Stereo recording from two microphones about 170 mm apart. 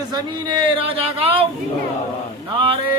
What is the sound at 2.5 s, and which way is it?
Speech, 30° right (ahead or behind).